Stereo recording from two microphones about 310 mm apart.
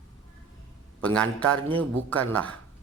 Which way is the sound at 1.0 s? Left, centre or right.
Centre.